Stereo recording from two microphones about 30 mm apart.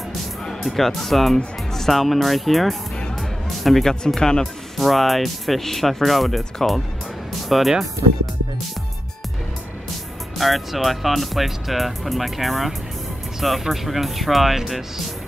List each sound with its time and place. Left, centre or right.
0.7 s speech: centre
3.2 s music: centre
4.2 s speech: left
4.7 s speech: centre
10.3 s speech: centre